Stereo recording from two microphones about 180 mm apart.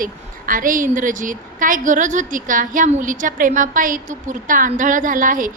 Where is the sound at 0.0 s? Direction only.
50° right (ahead or behind).